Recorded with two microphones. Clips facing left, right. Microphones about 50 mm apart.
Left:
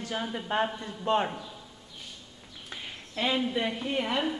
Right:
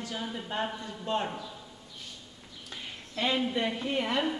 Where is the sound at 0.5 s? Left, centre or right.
Left.